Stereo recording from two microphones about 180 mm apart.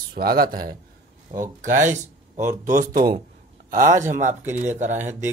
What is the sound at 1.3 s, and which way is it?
Speech, 25° right (ahead or behind).